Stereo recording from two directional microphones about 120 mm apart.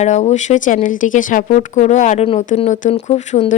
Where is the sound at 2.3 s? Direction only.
70° left (ahead or behind).